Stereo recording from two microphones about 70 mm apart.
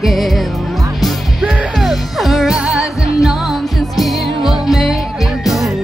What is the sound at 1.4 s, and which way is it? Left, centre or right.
Music, centre.